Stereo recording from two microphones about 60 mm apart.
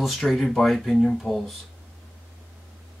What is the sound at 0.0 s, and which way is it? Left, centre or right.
Speech, centre.